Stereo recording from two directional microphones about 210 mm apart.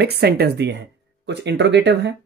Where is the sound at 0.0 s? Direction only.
50° right (ahead or behind).